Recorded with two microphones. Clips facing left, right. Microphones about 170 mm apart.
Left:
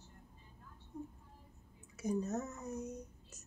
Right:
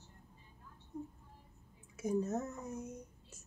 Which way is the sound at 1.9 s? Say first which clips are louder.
Right 2 dB; 5° right (ahead or behind).